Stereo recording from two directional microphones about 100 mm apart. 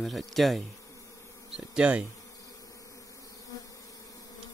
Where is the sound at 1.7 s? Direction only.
10° right (ahead or behind).